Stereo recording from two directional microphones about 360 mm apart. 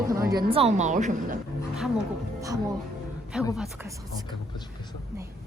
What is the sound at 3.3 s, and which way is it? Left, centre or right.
Speech, centre.